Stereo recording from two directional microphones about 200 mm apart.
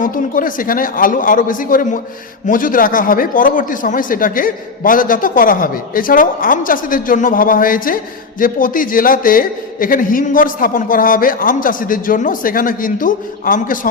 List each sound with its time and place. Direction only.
0.0 s speech: 45° left (ahead or behind)